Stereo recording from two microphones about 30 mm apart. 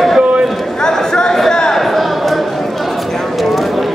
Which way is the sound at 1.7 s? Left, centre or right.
Centre.